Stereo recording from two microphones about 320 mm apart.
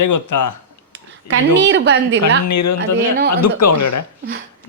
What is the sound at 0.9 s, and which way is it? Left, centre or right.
Speech, right.